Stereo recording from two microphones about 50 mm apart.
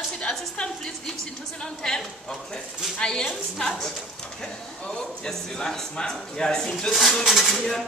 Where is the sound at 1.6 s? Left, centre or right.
Centre.